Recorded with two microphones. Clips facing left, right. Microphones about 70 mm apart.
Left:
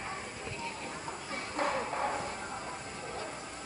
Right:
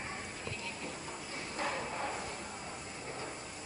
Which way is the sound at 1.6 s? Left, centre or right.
Left.